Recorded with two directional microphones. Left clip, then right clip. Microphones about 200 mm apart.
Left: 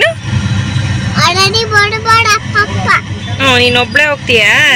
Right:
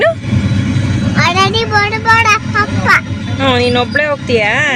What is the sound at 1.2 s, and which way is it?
Speech, 10° right (ahead or behind).